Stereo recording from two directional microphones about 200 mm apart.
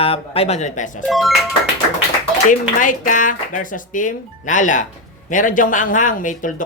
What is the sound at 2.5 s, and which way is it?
Speech, 40° left (ahead or behind).